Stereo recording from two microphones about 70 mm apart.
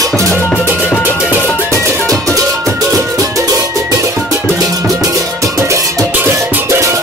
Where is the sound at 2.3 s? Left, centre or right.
Right.